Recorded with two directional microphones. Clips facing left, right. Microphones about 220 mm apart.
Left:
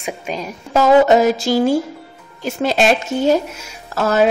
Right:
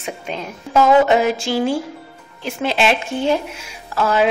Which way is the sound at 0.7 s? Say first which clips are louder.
Left 2 dB; 40° left (ahead or behind).